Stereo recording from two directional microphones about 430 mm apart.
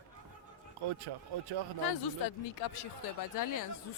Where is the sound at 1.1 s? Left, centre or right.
Right.